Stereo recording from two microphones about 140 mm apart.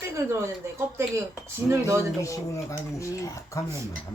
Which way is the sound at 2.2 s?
20° left (ahead or behind).